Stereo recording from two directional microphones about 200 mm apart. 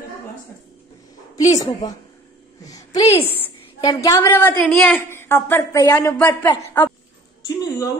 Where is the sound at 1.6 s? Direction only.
20° left (ahead or behind).